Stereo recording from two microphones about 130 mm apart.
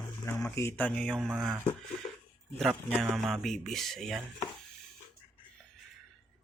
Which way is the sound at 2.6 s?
5° right (ahead or behind).